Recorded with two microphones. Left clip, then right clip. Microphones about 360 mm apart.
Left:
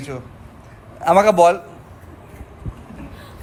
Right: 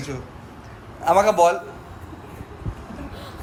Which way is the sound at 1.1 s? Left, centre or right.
Left.